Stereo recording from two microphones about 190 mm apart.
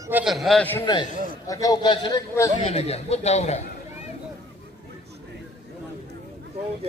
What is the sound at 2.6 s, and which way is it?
Speech, 35° left (ahead or behind).